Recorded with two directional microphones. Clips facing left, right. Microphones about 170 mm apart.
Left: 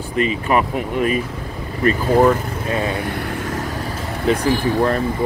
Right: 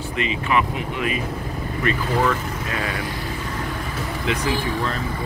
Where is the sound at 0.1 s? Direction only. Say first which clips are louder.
Left 5 dB; 45° left (ahead or behind); by 3.0 s 25° left (ahead or behind).